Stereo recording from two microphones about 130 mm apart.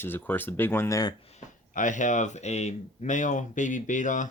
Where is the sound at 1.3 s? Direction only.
75° left (ahead or behind).